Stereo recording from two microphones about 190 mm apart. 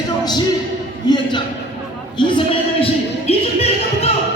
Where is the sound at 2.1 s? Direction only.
25° left (ahead or behind).